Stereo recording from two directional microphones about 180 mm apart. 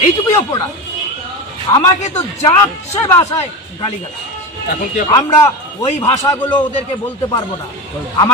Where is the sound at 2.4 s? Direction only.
15° left (ahead or behind).